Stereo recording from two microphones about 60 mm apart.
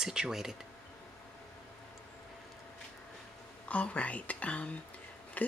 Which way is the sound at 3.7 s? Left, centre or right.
Left.